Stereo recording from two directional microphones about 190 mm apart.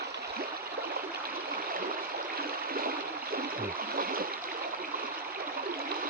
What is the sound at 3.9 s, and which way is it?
Stream, 50° right (ahead or behind).